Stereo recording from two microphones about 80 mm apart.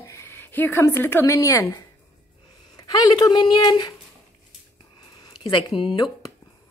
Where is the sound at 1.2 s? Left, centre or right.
Left.